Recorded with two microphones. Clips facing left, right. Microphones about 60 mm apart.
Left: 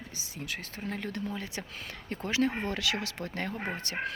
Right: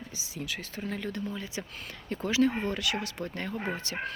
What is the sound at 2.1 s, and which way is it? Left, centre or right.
Speech, left.